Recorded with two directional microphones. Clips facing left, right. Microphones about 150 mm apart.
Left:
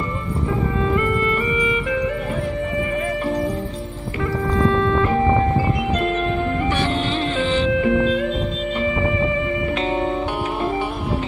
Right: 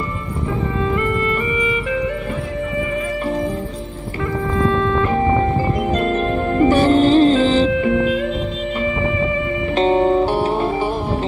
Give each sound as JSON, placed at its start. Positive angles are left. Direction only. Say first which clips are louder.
{"t": 5.9, "sound": "music", "louder": "right 3 dB", "side_deg": -40}
{"t": 9.8, "sound": "music", "louder": "right 12 dB", "side_deg": -35}